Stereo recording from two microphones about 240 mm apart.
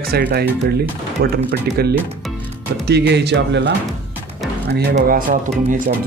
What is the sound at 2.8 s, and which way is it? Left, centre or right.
Speech, right.